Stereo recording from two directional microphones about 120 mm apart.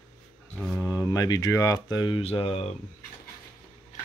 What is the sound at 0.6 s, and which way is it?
Speech, 5° left (ahead or behind).